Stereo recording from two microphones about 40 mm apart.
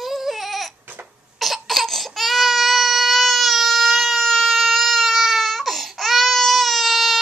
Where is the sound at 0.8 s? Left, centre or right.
Right.